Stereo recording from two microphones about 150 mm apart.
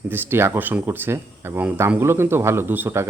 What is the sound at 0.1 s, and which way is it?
Speech, 15° right (ahead or behind).